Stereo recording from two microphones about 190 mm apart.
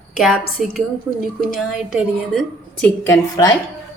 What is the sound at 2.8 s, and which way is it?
Speech, 15° left (ahead or behind).